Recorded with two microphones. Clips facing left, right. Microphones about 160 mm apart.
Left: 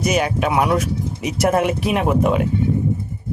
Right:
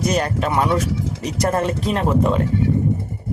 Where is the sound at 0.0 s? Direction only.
5° left (ahead or behind).